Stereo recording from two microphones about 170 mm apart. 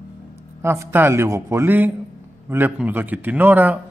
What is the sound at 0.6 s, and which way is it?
A man's voice, 15° right (ahead or behind).